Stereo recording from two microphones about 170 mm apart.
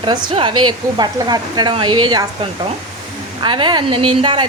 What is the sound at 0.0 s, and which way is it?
A woman's voice, 30° right (ahead or behind).